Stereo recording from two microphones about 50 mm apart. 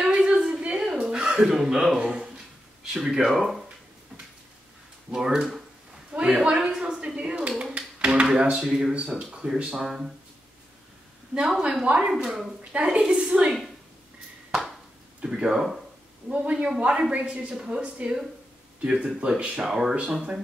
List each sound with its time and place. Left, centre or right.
0.0 s a sound: centre
1.2 s speech: centre
5.1 s speech: centre
6.1 s a woman's voice: right
7.7 s a sound: right
9.0 s speech: centre
11.6 s a woman's voice: centre
12.1 s speech: centre
12.7 s a woman's voice: right
15.2 s a woman's voice: centre
19.6 s speech: centre